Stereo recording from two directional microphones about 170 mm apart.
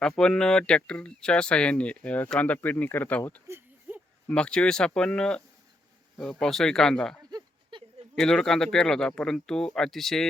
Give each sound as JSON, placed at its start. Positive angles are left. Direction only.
{"t": 0.0, "sound": "speech", "side_deg": 5}
{"t": 3.4, "sound": "a sound", "side_deg": -10}
{"t": 4.3, "sound": "speech", "side_deg": 5}
{"t": 6.4, "sound": "speech", "side_deg": 0}
{"t": 7.3, "sound": "a sound", "side_deg": -25}
{"t": 8.2, "sound": "speech", "side_deg": 5}